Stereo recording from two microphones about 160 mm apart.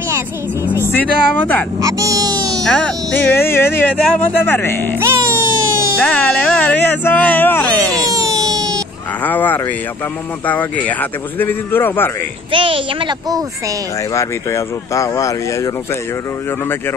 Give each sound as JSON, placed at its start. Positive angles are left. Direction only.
{"t": 0.8, "sound": "speech", "side_deg": 10}
{"t": 1.8, "sound": "music", "side_deg": -20}
{"t": 2.6, "sound": "speech", "side_deg": 5}
{"t": 4.9, "sound": "music", "side_deg": -15}
{"t": 6.0, "sound": "speech", "side_deg": 10}
{"t": 8.0, "sound": "baby cry", "side_deg": -20}
{"t": 9.2, "sound": "speech", "side_deg": 10}
{"t": 12.4, "sound": "a woman's voice", "side_deg": -35}
{"t": 14.1, "sound": "speech", "side_deg": 20}